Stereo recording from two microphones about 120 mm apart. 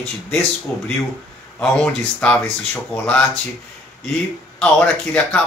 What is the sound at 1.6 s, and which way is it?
Speech, 5° left (ahead or behind).